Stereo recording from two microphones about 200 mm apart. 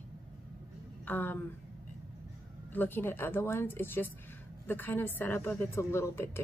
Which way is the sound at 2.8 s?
10° left (ahead or behind).